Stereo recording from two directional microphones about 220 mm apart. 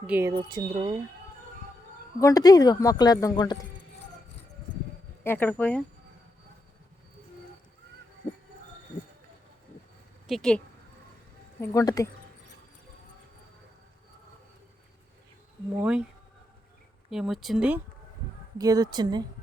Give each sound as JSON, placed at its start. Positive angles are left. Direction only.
{"t": 0.1, "sound": "speech", "side_deg": -15}
{"t": 2.2, "sound": "speech", "side_deg": 15}
{"t": 5.2, "sound": "speech", "side_deg": 10}
{"t": 10.2, "sound": "speech", "side_deg": 0}
{"t": 11.6, "sound": "speech", "side_deg": 15}
{"t": 15.8, "sound": "speech", "side_deg": -5}
{"t": 17.1, "sound": "speech", "side_deg": 0}
{"t": 18.5, "sound": "a woman's voice", "side_deg": -15}